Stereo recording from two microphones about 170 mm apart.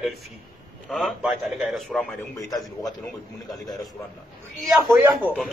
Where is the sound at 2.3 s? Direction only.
20° left (ahead or behind).